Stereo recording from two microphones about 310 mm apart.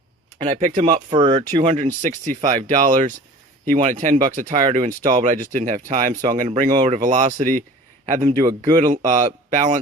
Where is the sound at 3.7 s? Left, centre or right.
Right.